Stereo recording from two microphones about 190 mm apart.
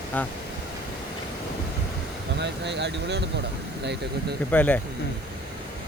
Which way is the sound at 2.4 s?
65° right (ahead or behind).